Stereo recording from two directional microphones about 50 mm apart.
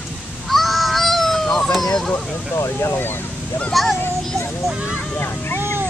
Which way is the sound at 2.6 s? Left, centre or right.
Left.